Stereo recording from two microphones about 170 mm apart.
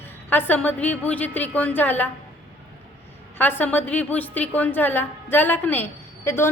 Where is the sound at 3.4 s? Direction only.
10° left (ahead or behind).